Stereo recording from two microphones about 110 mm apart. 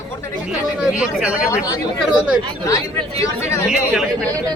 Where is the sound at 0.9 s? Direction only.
10° right (ahead or behind).